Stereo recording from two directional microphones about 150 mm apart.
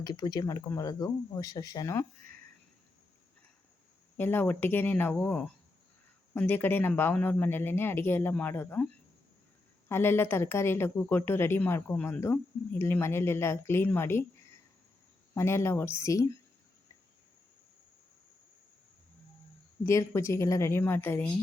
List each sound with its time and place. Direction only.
0.0 s speech: 25° left (ahead or behind)
4.2 s a woman's voice: 15° left (ahead or behind)
9.9 s a woman's voice: 15° left (ahead or behind)
15.4 s a woman's voice: 15° left (ahead or behind)
19.8 s a woman's voice: 20° left (ahead or behind)